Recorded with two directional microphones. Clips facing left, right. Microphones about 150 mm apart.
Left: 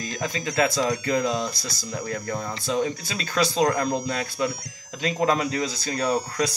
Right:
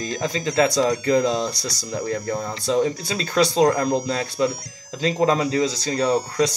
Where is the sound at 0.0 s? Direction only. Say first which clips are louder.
Right 4 dB; 30° right (ahead or behind).